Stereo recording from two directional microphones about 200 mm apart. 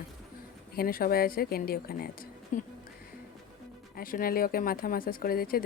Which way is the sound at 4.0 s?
45° left (ahead or behind).